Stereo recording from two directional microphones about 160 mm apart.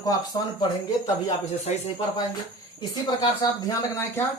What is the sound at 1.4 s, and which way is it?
Speech, 45° left (ahead or behind).